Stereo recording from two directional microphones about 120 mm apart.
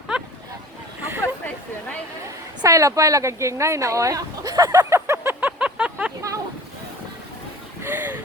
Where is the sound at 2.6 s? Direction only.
25° right (ahead or behind); by 6.1 s 10° right (ahead or behind).